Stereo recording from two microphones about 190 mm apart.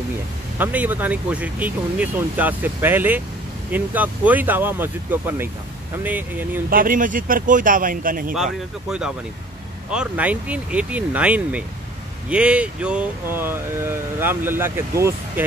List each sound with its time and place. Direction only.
0.6 s speech: 10° right (ahead or behind)
6.7 s speech: 45° right (ahead or behind)
8.3 s speech: 5° right (ahead or behind)